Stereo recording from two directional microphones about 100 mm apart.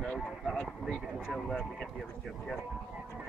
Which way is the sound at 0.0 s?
5° left (ahead or behind).